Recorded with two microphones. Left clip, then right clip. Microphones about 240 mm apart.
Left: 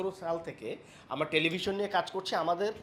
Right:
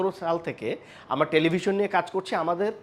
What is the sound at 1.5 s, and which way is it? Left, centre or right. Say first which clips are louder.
A man's voice: right 7 dB; right.